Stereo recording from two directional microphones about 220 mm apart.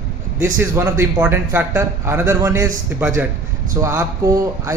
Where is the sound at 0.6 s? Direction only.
10° right (ahead or behind).